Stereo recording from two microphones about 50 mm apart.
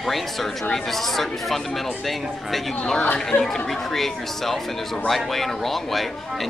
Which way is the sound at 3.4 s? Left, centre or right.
Centre.